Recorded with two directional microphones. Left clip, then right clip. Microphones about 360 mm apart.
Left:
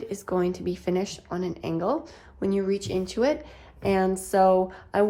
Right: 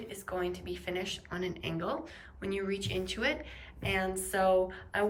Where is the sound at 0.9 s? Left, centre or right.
Centre.